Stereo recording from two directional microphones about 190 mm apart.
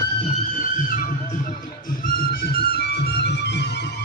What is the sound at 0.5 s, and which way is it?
Music, 45° left (ahead or behind).